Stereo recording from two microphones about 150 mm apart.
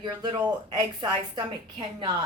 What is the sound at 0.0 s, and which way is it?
Speech, 30° right (ahead or behind).